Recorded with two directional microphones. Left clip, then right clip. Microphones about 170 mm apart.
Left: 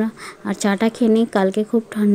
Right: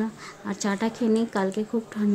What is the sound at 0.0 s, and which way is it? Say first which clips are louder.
A woman's voice: left 7 dB; 30° left (ahead or behind).